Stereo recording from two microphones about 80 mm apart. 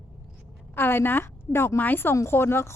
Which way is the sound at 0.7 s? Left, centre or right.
Left.